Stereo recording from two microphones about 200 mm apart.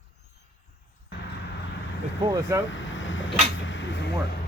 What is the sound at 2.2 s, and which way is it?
Speech, 20° right (ahead or behind).